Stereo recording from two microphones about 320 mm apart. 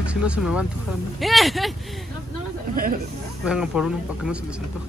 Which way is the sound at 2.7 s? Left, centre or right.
Right.